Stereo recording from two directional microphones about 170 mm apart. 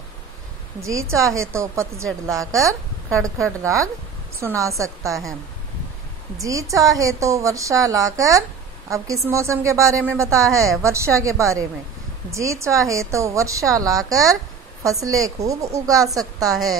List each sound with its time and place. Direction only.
0.7 s a woman's voice: 15° right (ahead or behind)
6.4 s a woman's voice: 20° right (ahead or behind)
15.4 s speech: 40° right (ahead or behind)
15.7 s a woman's voice: 20° right (ahead or behind)